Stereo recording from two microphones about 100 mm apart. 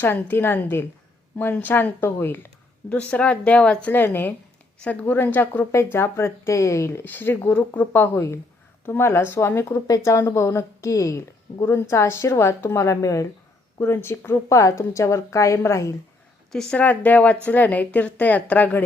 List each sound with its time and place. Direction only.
0.0 s a woman's voice: 20° left (ahead or behind)
9.7 s a woman's voice: 35° left (ahead or behind)
16.5 s a woman's voice: 5° left (ahead or behind)
16.8 s a woman's voice: 15° left (ahead or behind)